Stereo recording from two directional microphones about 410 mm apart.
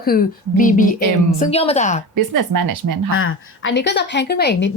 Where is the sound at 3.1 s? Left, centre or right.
Left.